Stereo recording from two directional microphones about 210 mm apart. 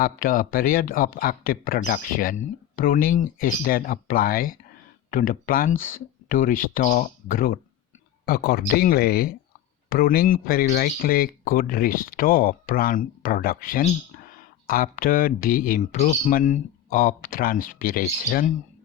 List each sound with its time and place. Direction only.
0.0 s speech: 40° left (ahead or behind)